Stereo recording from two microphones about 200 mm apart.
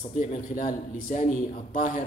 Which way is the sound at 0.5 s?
45° left (ahead or behind).